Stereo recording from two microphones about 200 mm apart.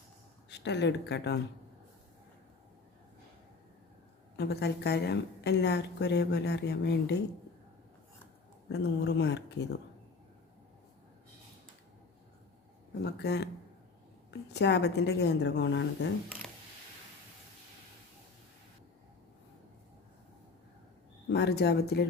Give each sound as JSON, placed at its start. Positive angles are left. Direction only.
{"t": 0.5, "sound": "a woman's voice", "side_deg": 60}
{"t": 4.4, "sound": "a woman's voice", "side_deg": 55}
{"t": 8.7, "sound": "a woman's voice", "side_deg": 60}
{"t": 12.9, "sound": "a woman's voice", "side_deg": 55}
{"t": 21.2, "sound": "a woman's voice", "side_deg": 55}